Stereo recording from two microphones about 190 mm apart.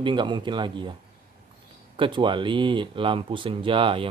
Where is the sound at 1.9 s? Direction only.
25° right (ahead or behind).